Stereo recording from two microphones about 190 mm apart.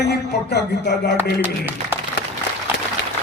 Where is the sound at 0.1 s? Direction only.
60° left (ahead or behind).